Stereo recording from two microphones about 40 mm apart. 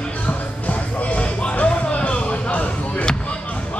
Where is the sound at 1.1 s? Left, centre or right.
Left.